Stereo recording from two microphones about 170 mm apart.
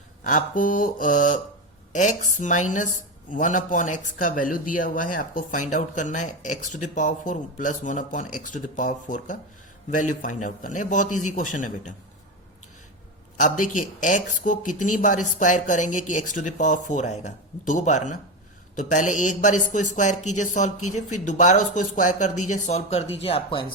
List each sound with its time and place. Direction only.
0.3 s speech: 50° left (ahead or behind)
13.3 s speech: 50° left (ahead or behind); by 23.7 s 30° left (ahead or behind)